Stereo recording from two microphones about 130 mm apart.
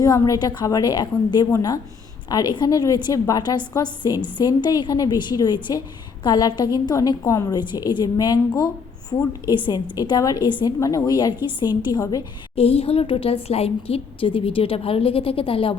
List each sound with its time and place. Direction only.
0.0 s a woman's voice: 30° left (ahead or behind)
12.5 s a woman's voice: 50° left (ahead or behind)